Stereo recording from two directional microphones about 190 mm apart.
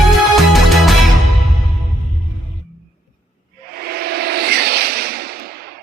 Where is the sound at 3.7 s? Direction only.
55° right (ahead or behind).